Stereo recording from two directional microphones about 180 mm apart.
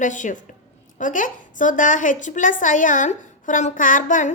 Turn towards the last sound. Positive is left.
turn(degrees=45)  # may be behind; listen again after turning